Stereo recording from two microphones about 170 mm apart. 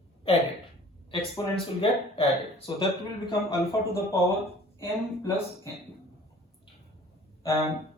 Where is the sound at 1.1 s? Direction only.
30° left (ahead or behind); by 5.3 s 15° left (ahead or behind).